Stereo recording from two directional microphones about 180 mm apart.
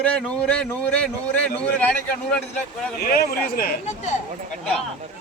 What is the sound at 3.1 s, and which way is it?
A man's voice, 55° left (ahead or behind).